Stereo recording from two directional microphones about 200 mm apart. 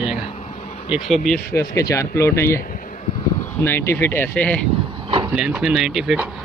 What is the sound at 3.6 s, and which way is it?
Speech, 10° left (ahead or behind).